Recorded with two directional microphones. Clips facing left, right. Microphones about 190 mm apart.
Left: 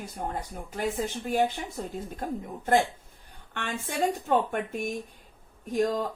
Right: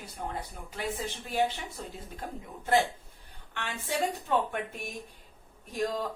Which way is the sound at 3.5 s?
50° left (ahead or behind).